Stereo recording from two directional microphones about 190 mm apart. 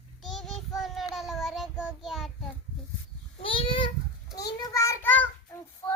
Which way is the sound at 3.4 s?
25° left (ahead or behind).